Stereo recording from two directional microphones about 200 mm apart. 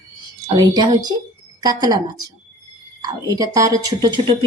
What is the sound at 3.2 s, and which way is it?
Speech, 15° right (ahead or behind).